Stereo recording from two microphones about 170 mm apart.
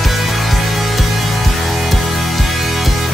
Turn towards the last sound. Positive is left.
turn(degrees=0)  # may be behind; listen again after turning